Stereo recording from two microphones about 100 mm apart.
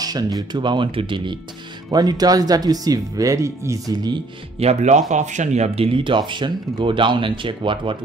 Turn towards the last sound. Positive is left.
turn(degrees=-60)  # may be behind; listen again after turning